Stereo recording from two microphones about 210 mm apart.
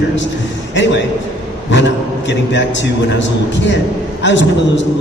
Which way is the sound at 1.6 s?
60° left (ahead or behind).